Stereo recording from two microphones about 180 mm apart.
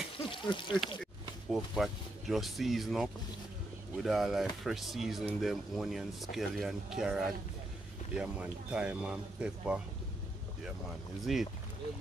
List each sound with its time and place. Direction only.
0.2 s a sound: 30° left (ahead or behind)
1.5 s speech: centre (ahead or behind)
11.3 s speech: centre (ahead or behind)